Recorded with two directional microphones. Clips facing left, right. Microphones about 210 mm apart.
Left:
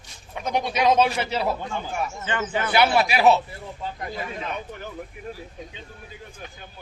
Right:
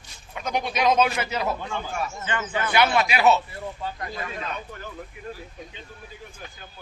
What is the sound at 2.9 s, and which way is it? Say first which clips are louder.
Speech: left 2 dB; 35° left (ahead or behind).